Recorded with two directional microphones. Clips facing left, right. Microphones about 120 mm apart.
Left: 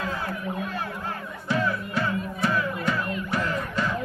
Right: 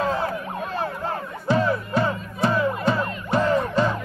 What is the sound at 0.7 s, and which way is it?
Music, 30° right (ahead or behind).